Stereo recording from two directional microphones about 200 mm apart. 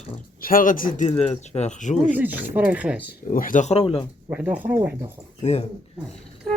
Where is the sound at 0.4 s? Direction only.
45° left (ahead or behind).